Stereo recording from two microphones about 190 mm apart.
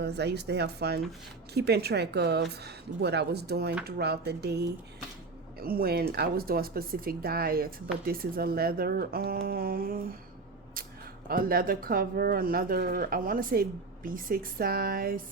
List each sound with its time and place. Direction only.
0.0 s speech: 60° right (ahead or behind)
11.3 s speech: 50° right (ahead or behind)